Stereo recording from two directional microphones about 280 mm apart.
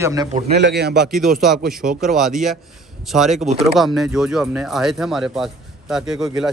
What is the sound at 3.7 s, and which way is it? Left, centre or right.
Speech, centre.